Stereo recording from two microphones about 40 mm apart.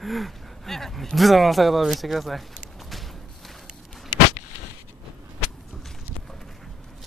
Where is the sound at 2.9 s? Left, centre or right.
Centre.